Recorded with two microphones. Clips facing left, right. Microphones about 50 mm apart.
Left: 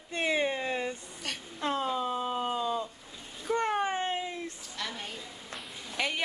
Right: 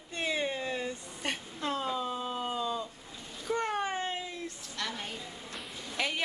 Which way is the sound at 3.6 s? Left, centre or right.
Left.